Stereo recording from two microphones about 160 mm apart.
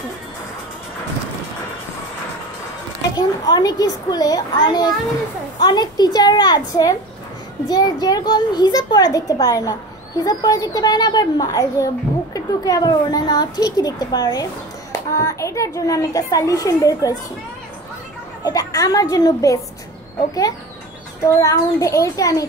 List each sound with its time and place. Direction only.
3.2 s a child's voice: 25° left (ahead or behind)
18.4 s a child's voice: 20° left (ahead or behind)
21.2 s a child's voice: 20° left (ahead or behind)